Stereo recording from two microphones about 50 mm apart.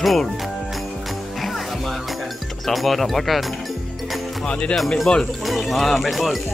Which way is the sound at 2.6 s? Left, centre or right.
Centre.